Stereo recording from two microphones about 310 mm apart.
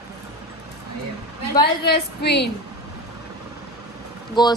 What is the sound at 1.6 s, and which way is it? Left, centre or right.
Speech, left.